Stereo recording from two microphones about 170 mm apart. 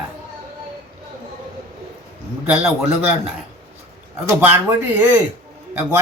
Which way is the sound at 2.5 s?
5° right (ahead or behind).